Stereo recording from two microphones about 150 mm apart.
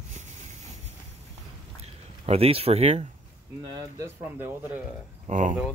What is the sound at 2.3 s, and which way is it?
Speech, 40° right (ahead or behind).